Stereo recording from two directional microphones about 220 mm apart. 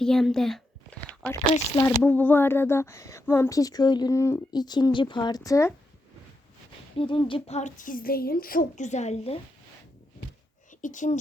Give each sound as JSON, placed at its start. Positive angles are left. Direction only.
{"t": 0.0, "sound": "a sound", "side_deg": 0}
{"t": 1.7, "sound": "speech", "side_deg": 15}
{"t": 7.0, "sound": "speech", "side_deg": 20}
{"t": 10.7, "sound": "speech", "side_deg": 35}